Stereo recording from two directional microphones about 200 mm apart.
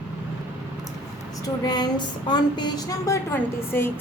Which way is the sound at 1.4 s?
20° left (ahead or behind).